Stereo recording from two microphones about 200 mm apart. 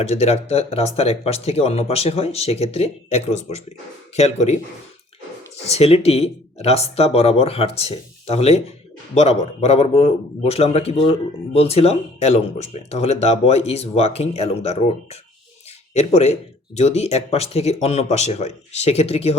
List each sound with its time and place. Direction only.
0.0 s a man's voice: 30° left (ahead or behind)
5.6 s a man's voice: 30° left (ahead or behind)